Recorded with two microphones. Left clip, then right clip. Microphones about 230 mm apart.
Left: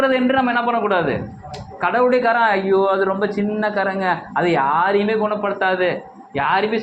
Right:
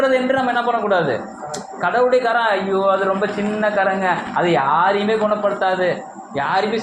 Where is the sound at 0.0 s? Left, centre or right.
Left.